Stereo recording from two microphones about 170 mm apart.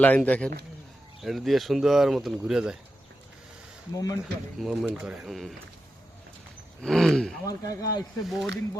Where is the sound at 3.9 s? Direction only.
20° left (ahead or behind).